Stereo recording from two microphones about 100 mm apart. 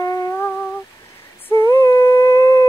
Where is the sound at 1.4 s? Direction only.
25° left (ahead or behind).